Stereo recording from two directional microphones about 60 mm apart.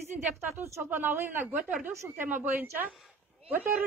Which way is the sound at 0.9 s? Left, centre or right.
Right.